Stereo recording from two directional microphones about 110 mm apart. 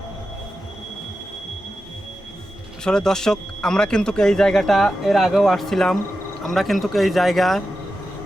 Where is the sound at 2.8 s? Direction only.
5° left (ahead or behind).